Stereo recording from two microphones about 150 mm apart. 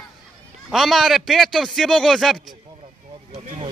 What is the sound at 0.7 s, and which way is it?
Speech, centre (ahead or behind).